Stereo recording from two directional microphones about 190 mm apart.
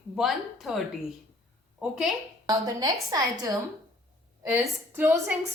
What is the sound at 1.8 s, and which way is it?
Speech, centre (ahead or behind).